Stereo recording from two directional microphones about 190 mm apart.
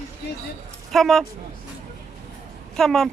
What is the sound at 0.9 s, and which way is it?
Speech, centre (ahead or behind).